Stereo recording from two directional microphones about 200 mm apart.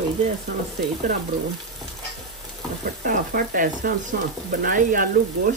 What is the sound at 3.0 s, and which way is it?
Speech, 45° right (ahead or behind).